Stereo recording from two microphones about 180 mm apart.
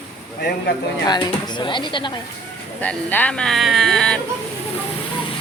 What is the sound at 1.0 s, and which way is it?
Speech, 25° left (ahead or behind).